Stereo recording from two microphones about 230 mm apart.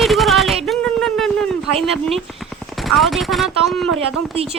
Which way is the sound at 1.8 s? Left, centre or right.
Centre.